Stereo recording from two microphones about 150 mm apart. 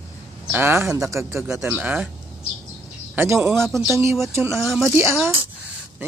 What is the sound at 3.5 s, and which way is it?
Speech, centre (ahead or behind).